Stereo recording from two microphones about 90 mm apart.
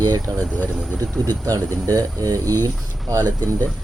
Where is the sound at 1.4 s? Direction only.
40° right (ahead or behind).